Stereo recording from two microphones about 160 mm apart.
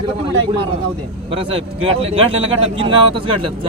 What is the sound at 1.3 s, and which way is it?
Speech, 35° right (ahead or behind).